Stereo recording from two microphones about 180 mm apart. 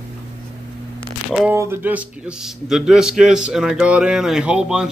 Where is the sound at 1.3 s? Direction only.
5° right (ahead or behind).